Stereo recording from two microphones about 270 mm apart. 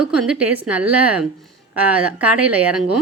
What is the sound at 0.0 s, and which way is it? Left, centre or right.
A woman's voice, centre.